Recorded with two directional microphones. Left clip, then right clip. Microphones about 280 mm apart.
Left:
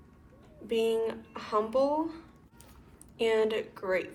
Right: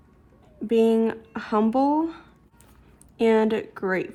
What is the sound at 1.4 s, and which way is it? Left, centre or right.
Speech, right.